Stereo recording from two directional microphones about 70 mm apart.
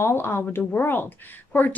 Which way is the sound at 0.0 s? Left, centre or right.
Left.